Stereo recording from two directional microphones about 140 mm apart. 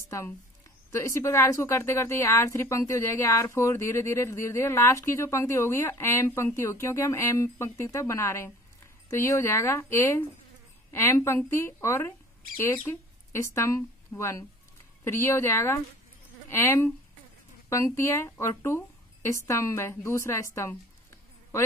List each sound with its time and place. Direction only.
0.9 s a woman's voice: 20° left (ahead or behind)